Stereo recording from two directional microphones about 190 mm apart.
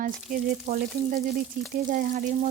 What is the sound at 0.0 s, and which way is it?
A woman's voice, 55° right (ahead or behind).